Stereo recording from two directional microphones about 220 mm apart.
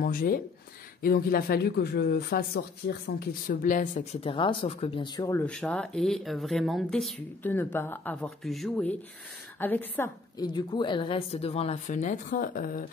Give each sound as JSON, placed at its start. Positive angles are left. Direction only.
{"t": 0.0, "sound": "speech", "side_deg": 40}